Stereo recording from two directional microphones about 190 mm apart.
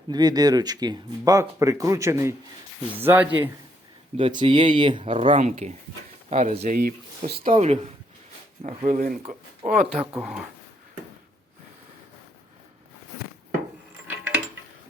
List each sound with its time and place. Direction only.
0.1 s speech: 20° right (ahead or behind)
4.2 s speech: 25° right (ahead or behind)
6.7 s speech: 55° right (ahead or behind)
7.5 s speech: 35° right (ahead or behind)
10.2 s speech: 5° right (ahead or behind)
14.1 s a sound: 10° right (ahead or behind)